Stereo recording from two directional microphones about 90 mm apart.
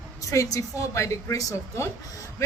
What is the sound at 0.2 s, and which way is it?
A woman's voice, 40° left (ahead or behind).